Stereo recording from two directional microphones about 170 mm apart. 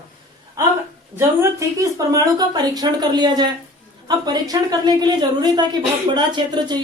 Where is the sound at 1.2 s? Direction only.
20° right (ahead or behind).